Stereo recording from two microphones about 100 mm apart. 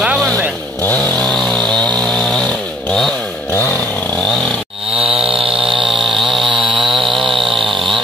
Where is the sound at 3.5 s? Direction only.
25° left (ahead or behind).